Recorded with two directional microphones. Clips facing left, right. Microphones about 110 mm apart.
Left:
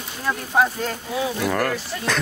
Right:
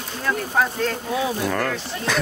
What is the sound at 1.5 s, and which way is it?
Speech, centre (ahead or behind).